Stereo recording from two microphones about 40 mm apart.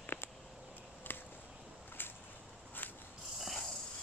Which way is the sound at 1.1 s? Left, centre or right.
Left.